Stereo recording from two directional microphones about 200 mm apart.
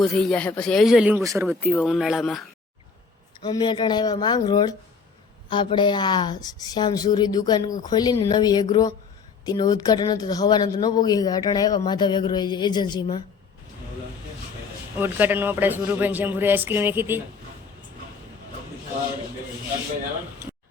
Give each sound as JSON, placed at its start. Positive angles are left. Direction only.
{"t": 0.0, "sound": "speech", "side_deg": 5}
{"t": 1.5, "sound": "speech", "side_deg": -5}
{"t": 3.4, "sound": "a woman's voice", "side_deg": 20}
{"t": 14.9, "sound": "a man's voice", "side_deg": -10}